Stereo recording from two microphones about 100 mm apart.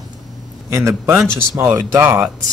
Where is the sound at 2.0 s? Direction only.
20° right (ahead or behind).